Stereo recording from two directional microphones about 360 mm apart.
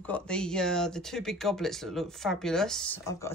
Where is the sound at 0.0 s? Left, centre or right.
Centre.